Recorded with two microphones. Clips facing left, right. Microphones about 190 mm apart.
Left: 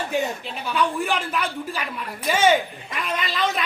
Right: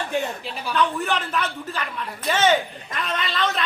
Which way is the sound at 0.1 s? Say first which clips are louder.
Left 1 dB; centre (ahead or behind).